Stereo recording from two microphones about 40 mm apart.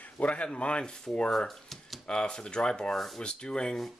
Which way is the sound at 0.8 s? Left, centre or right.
Centre.